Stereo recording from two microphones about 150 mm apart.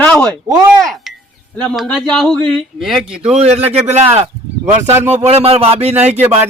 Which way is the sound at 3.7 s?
45° right (ahead or behind).